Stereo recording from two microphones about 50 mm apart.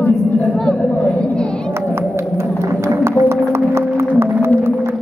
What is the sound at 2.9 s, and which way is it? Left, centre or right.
Music, right.